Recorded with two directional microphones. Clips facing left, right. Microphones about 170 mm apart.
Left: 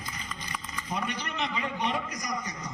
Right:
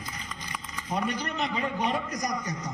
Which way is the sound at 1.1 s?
40° right (ahead or behind).